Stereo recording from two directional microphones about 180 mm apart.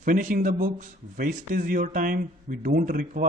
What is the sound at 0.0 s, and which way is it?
Speech, 50° right (ahead or behind).